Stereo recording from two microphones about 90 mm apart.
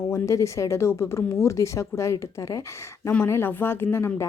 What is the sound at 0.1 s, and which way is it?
A woman's voice, 35° left (ahead or behind).